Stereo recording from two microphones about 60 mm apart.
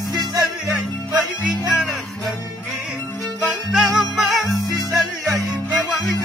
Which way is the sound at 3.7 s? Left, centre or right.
Centre.